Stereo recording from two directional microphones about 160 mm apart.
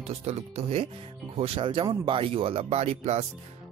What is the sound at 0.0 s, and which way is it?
Speech, 40° right (ahead or behind).